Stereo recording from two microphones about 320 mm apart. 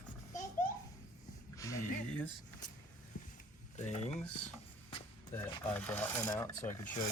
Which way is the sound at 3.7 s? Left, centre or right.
Left.